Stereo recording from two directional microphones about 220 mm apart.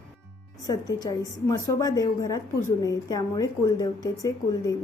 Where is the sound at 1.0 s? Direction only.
15° left (ahead or behind).